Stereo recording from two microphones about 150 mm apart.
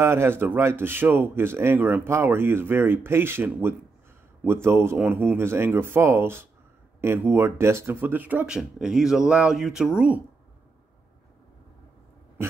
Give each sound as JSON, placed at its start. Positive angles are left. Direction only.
{"t": 0.0, "sound": "a man's voice", "side_deg": -15}